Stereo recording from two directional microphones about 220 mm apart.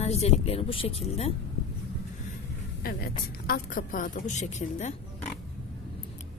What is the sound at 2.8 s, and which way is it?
A woman's voice, 45° left (ahead or behind).